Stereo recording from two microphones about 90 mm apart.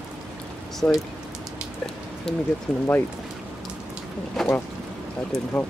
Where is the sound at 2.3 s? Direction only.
5° left (ahead or behind).